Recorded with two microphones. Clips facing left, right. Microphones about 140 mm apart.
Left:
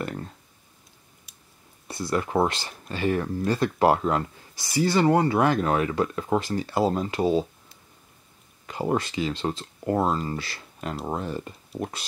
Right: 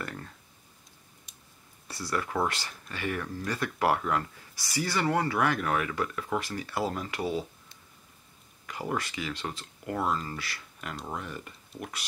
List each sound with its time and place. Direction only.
0.0 s clicking: 25° left (ahead or behind)
1.3 s a sound: centre (ahead or behind)
1.9 s speech: 20° left (ahead or behind)
8.6 s speech: 25° left (ahead or behind)